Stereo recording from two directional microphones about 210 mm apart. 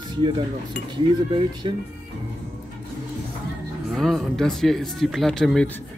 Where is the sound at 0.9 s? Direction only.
20° right (ahead or behind).